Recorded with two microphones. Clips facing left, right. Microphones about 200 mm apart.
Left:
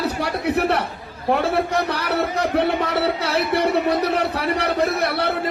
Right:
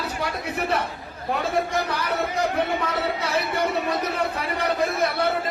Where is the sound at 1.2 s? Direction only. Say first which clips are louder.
Left 5 dB; 70° left (ahead or behind).